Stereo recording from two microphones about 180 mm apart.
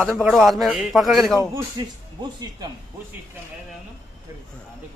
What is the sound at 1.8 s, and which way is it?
Speech, 25° right (ahead or behind).